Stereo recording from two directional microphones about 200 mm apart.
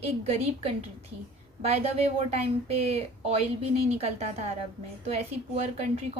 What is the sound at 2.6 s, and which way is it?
A woman's voice, 30° right (ahead or behind).